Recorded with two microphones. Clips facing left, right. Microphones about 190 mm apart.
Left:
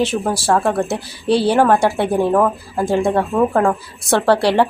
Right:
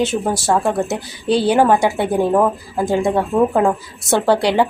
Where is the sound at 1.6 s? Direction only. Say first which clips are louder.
Right 1 dB; 10° right (ahead or behind).